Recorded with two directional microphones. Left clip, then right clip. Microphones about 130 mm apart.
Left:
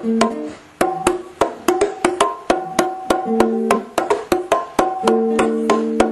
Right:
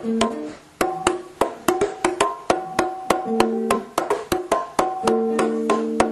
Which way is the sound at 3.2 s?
15° left (ahead or behind).